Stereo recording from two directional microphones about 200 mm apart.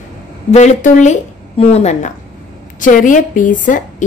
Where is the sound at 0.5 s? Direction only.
35° left (ahead or behind).